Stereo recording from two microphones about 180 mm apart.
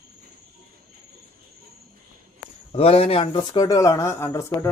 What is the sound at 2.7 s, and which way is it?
Speech, 35° left (ahead or behind).